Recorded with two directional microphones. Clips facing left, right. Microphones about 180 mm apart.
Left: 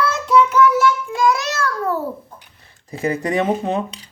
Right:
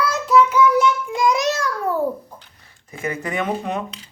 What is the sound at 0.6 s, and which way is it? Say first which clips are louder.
Child singing: left 1 dB; 20° right (ahead or behind).